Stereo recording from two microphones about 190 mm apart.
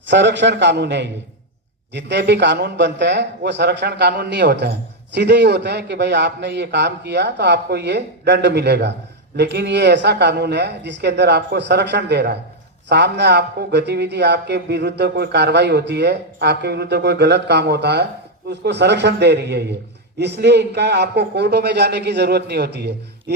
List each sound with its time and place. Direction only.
0.1 s a man's voice: 70° right (ahead or behind)